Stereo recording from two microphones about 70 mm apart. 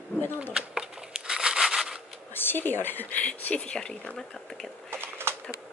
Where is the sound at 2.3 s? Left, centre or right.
Left; by 4.7 s centre.